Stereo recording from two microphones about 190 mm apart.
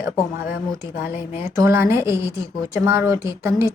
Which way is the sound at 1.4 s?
15° right (ahead or behind).